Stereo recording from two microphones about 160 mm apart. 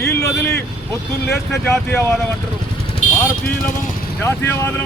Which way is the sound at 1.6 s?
15° left (ahead or behind).